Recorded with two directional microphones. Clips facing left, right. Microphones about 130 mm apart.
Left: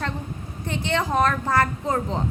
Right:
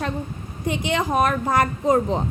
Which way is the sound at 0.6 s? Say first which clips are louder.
Right 2 dB; 15° right (ahead or behind).